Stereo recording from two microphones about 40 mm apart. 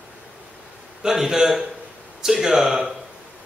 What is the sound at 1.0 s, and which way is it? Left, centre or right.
Speech, centre.